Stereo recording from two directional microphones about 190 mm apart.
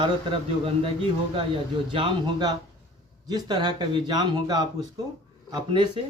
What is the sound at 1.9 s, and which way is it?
Speech, 25° right (ahead or behind).